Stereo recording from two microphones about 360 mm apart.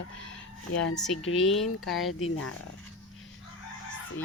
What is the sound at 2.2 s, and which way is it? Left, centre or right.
Speech, left.